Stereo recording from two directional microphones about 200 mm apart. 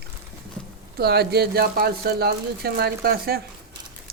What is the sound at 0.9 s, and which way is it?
Speech, 55° right (ahead or behind).